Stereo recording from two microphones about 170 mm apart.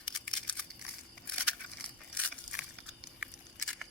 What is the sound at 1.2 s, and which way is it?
Crushing, 5° left (ahead or behind).